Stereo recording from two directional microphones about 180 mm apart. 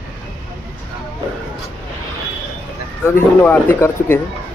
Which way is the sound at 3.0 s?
10° left (ahead or behind).